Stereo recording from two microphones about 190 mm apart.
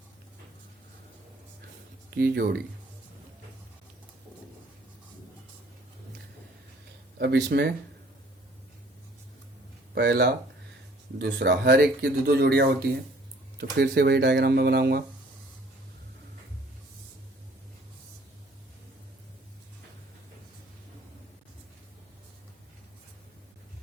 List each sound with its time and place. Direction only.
2.0 s speech: 60° right (ahead or behind)
7.2 s speech: 60° right (ahead or behind)
9.9 s speech: 60° right (ahead or behind)